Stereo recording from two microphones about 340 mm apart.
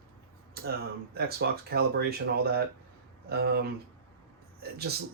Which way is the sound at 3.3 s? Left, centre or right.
Right.